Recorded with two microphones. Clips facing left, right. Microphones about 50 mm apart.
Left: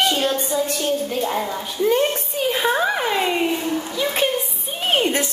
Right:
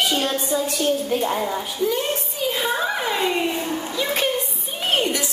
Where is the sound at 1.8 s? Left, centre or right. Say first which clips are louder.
Left 5 dB; left.